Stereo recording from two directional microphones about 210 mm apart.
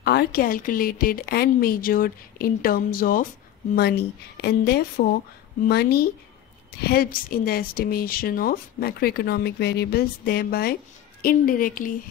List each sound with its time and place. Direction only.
0.0 s speech: 50° left (ahead or behind)